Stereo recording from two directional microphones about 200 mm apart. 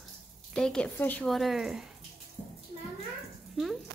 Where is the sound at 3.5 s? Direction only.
Centre (ahead or behind).